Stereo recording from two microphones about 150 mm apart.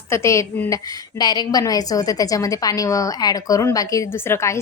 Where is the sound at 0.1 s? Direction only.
20° left (ahead or behind).